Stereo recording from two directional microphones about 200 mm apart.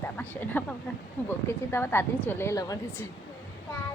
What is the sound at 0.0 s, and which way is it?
A woman's voice, 10° left (ahead or behind).